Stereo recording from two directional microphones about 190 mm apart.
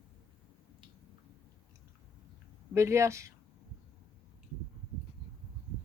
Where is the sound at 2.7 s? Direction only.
15° right (ahead or behind).